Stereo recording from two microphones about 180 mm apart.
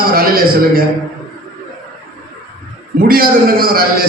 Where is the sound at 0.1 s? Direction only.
55° right (ahead or behind).